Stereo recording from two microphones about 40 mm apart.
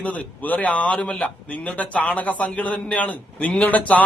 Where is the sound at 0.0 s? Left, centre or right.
Left.